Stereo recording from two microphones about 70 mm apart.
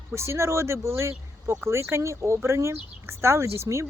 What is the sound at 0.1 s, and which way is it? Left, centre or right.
Speech, right.